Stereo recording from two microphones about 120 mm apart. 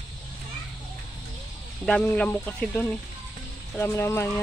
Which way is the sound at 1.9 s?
10° left (ahead or behind).